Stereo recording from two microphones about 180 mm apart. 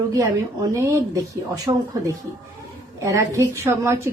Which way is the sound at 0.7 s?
15° right (ahead or behind).